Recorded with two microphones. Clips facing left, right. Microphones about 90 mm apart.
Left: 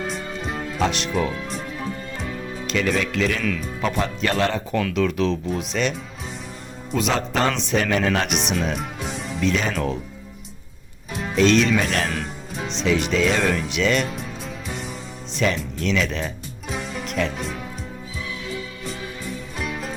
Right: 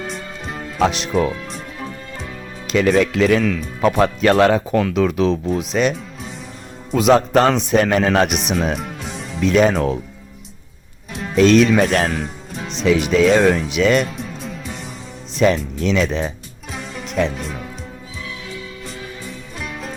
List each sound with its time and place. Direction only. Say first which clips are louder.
0.1 s music: left 1 dB; centre (ahead or behind)
2.7 s speech: right 7 dB; 45° right (ahead or behind)
3.8 s speech: right 10 dB; 55° right (ahead or behind); by 5.9 s 35° right (ahead or behind)
6.9 s speech: right 9 dB; 55° right (ahead or behind)
7.2 s speech: right 7 dB; 40° right (ahead or behind)
8.3 s speech: right 3 dB; 5° right (ahead or behind)
8.8 s music: even; centre (ahead or behind)
9.4 s speech: right 8 dB; 50° right (ahead or behind)
11.3 s speech: right 5 dB; 45° right (ahead or behind)
12.1 s speech: right 3 dB; 5° right (ahead or behind)
13.1 s speech: right 7 dB; 45° right (ahead or behind)
15.4 s speech: right 7 dB; 40° right (ahead or behind)
16.7 s music: left 1 dB; centre (ahead or behind)
19.6 s music: even; centre (ahead or behind)